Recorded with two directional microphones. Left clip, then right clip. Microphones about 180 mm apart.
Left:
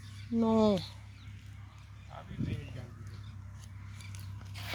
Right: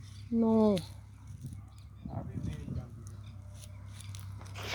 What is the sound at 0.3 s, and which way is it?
Speech, 10° right (ahead or behind).